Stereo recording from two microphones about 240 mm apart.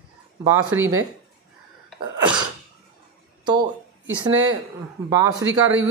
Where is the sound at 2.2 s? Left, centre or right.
Centre.